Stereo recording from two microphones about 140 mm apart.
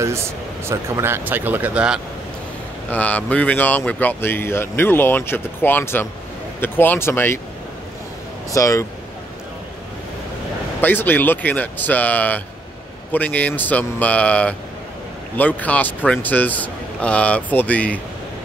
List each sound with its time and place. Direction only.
0.7 s speech: 20° right (ahead or behind)
2.9 s speech: 10° left (ahead or behind)
8.5 s speech: 25° left (ahead or behind)
10.8 s speech: 15° left (ahead or behind)